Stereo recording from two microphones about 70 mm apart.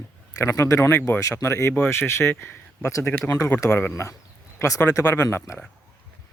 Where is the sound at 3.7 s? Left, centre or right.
Left.